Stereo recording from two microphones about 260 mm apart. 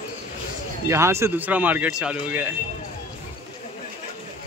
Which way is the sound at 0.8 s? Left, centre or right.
Centre.